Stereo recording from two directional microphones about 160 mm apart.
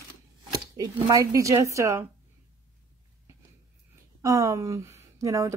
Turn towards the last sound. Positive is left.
turn(degrees=-20)  # may be behind; listen again after turning